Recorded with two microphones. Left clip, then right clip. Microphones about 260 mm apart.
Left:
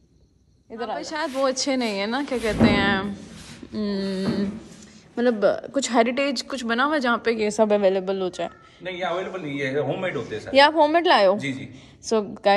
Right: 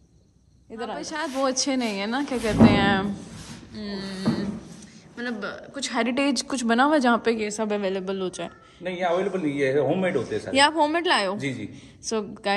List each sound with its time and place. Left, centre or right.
0.7 s a woman's voice: centre
3.7 s speech: centre
6.0 s a woman's voice: centre
7.4 s a woman's voice: centre
8.8 s a man's voice: right
10.5 s a woman's voice: centre
11.3 s a man's voice: right
12.1 s speech: centre